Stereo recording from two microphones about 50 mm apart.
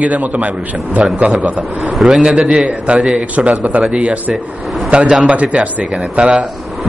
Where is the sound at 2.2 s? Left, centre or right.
Centre.